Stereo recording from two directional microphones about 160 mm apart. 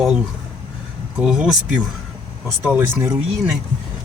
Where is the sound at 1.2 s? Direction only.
5° right (ahead or behind).